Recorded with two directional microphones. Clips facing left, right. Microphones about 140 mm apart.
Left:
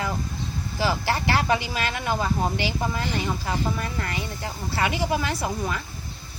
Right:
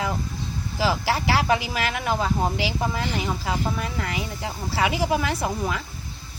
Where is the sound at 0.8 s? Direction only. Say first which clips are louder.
Right 1 dB; 5° right (ahead or behind).